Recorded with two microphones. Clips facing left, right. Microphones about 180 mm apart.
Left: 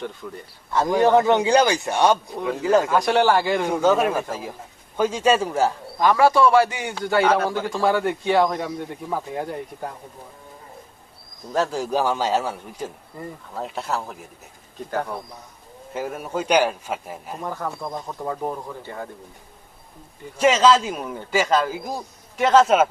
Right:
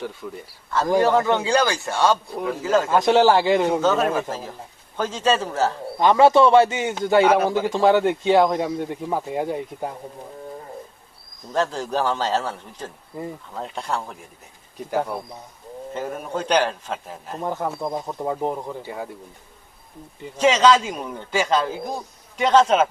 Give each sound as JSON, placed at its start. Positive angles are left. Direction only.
{"t": 0.2, "sound": "speech", "side_deg": 0}
{"t": 0.9, "sound": "a man's voice", "side_deg": 20}
{"t": 2.9, "sound": "a man's voice", "side_deg": -20}
{"t": 3.8, "sound": "a man's voice", "side_deg": 10}
{"t": 6.0, "sound": "a man's voice", "side_deg": -25}
{"t": 11.5, "sound": "a man's voice", "side_deg": 10}
{"t": 14.8, "sound": "speech", "side_deg": -10}
{"t": 15.9, "sound": "a man's voice", "side_deg": 5}
{"t": 17.4, "sound": "a man's voice", "side_deg": -20}
{"t": 20.3, "sound": "a man's voice", "side_deg": 10}